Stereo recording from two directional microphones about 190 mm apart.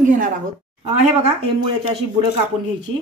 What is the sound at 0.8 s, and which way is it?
Speech, 30° right (ahead or behind).